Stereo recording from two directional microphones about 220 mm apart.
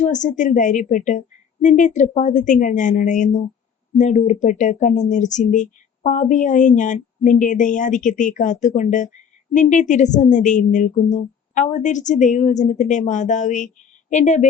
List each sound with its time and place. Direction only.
0.0 s speech: 35° left (ahead or behind)